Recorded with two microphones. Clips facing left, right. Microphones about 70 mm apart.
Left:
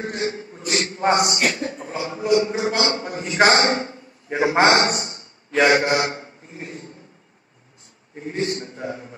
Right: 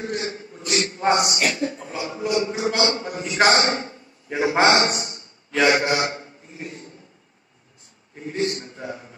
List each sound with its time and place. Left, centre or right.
0.0 s a man's voice: left
8.3 s a man's voice: left